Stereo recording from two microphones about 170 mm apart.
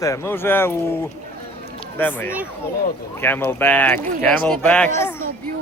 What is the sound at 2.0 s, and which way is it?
Speech, 10° left (ahead or behind).